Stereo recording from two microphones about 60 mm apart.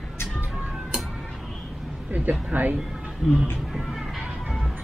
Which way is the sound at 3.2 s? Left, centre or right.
Centre.